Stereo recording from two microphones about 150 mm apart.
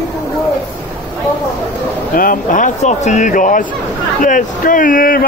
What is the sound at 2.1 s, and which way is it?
Speech, 70° left (ahead or behind).